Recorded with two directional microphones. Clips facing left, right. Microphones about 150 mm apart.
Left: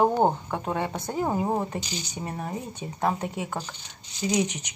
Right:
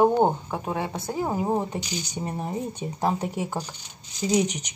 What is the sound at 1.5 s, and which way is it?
Speech, 20° right (ahead or behind).